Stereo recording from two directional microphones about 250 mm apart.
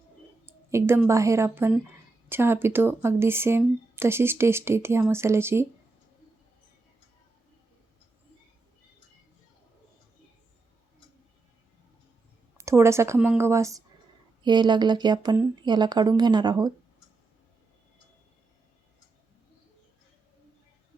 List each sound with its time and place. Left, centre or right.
0.7 s speech: centre
12.5 s speech: centre